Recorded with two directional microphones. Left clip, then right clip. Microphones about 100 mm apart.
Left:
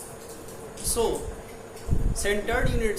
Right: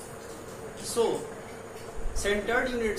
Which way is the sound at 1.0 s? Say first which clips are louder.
Left 1 dB; 5° right (ahead or behind).